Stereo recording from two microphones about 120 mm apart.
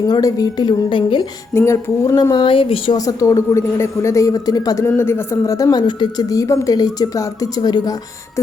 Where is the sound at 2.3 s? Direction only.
45° left (ahead or behind).